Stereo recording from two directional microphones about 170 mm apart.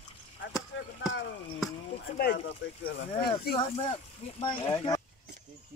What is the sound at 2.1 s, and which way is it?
Speech, 60° left (ahead or behind).